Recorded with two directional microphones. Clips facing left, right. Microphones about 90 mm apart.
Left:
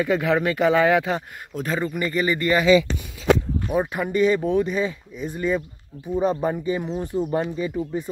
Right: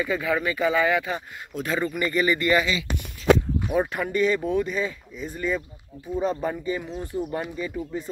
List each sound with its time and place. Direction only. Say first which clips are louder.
0.0 s speech: left 4 dB; 70° left (ahead or behind); by 1.2 s 90° left
1.5 s a man's voice: left 1 dB; 35° left (ahead or behind)
3.7 s speech: left 2 dB; 10° left (ahead or behind)